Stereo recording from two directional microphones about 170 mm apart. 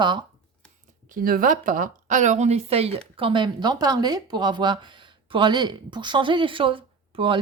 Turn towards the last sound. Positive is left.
turn(degrees=-30)  # may be behind; listen again after turning